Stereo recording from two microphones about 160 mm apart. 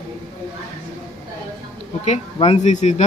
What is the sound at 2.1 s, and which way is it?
Speech, 35° left (ahead or behind).